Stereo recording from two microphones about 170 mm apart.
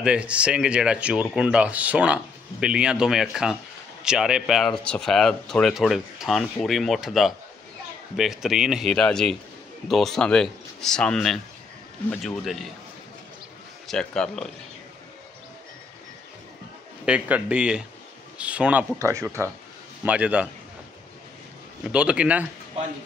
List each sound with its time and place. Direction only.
0.0 s speech: 5° right (ahead or behind)
13.8 s speech: 5° left (ahead or behind)
17.0 s speech: 5° right (ahead or behind)
18.9 s speech: 15° right (ahead or behind)
21.8 s speech: 5° right (ahead or behind)